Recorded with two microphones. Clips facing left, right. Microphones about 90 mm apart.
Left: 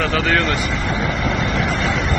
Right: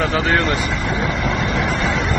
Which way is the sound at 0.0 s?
25° right (ahead or behind).